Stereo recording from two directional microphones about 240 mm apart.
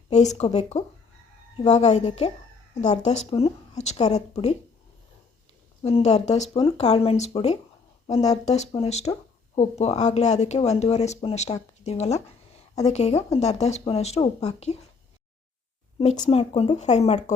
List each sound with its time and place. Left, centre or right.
0.1 s speech: left
5.8 s speech: left
11.8 s a sound: left
12.8 s speech: left
16.0 s speech: left